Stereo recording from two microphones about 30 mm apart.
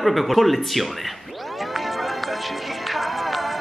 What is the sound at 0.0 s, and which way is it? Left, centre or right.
Speech, centre.